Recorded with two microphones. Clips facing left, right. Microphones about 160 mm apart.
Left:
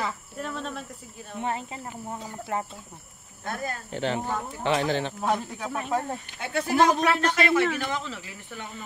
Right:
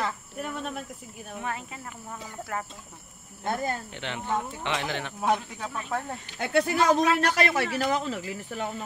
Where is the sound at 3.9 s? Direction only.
35° left (ahead or behind).